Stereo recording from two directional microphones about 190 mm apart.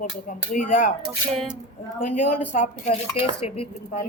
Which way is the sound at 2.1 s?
40° left (ahead or behind).